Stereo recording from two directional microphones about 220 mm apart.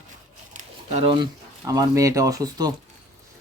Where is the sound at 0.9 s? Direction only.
25° right (ahead or behind).